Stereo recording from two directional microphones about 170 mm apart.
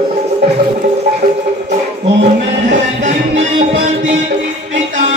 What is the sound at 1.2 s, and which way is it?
Music, 45° right (ahead or behind).